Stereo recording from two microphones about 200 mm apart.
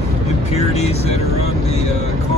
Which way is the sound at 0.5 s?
30° left (ahead or behind).